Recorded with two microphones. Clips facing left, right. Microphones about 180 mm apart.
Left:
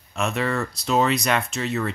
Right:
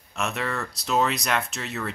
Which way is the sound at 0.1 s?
Centre (ahead or behind).